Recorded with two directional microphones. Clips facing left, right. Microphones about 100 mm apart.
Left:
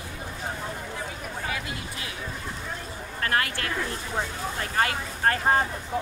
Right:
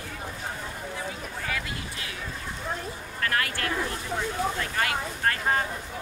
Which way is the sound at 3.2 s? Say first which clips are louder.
Left 1 dB; 30° left (ahead or behind).